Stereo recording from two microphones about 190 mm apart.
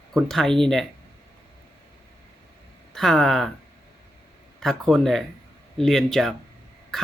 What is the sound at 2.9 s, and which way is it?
Speech, centre (ahead or behind).